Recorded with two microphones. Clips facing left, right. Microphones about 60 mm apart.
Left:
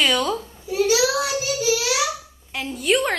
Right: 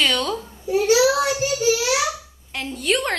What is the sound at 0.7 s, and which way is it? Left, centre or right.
A child's voice, right.